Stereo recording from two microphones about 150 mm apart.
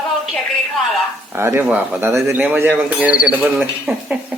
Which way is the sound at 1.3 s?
15° right (ahead or behind).